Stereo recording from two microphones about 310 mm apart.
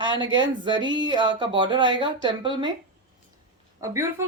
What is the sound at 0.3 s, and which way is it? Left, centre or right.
A woman's voice, centre.